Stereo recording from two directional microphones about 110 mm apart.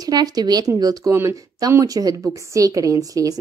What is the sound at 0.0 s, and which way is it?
Speech, 35° right (ahead or behind).